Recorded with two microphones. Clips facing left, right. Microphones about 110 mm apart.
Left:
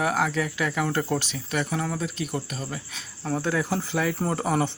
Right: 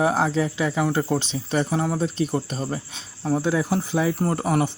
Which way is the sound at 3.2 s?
15° right (ahead or behind).